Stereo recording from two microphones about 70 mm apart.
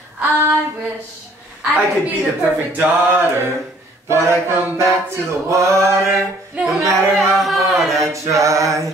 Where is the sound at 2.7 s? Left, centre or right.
Right.